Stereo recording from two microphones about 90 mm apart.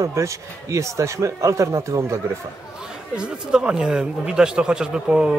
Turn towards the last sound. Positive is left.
turn(degrees=-10)  # may be behind; listen again after turning